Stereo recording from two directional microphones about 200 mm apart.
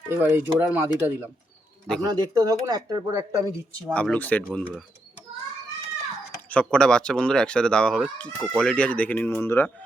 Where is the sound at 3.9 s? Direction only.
5° left (ahead or behind).